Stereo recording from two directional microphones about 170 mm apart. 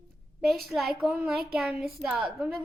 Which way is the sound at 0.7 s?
Centre (ahead or behind).